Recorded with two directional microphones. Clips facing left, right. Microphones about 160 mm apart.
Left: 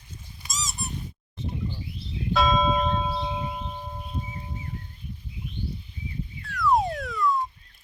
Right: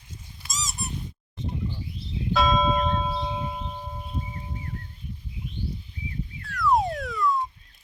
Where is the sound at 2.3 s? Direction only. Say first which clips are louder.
Even; centre (ahead or behind).